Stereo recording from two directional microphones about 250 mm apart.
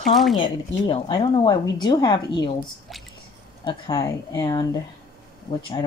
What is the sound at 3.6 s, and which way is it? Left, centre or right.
Speech, centre.